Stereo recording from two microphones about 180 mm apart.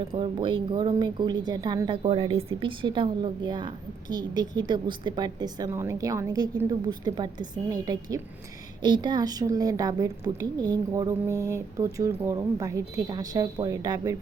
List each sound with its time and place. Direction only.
0.1 s a woman's voice: 30° right (ahead or behind)